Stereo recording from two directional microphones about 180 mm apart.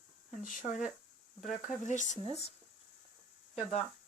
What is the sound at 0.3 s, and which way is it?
Speech, 45° left (ahead or behind).